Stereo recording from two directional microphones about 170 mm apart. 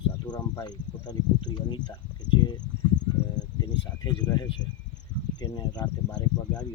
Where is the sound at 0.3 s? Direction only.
25° left (ahead or behind).